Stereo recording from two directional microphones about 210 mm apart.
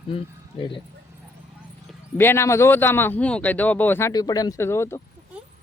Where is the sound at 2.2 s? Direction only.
10° left (ahead or behind).